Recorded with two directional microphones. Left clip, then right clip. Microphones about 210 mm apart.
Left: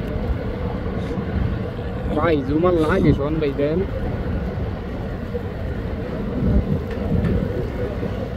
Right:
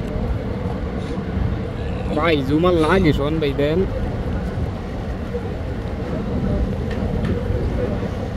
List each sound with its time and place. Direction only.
2.1 s speech: 5° right (ahead or behind)